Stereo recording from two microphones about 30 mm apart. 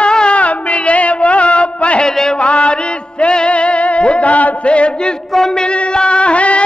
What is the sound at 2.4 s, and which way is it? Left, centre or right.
Music, left.